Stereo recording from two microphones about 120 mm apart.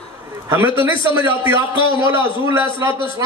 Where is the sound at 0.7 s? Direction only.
45° left (ahead or behind).